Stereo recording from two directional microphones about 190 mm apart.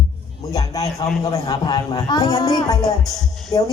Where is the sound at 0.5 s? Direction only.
20° left (ahead or behind).